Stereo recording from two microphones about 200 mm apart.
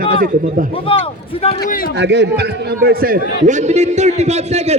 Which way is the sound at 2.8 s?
45° right (ahead or behind).